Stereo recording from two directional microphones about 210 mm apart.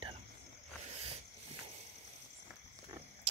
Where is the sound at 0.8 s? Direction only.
30° right (ahead or behind).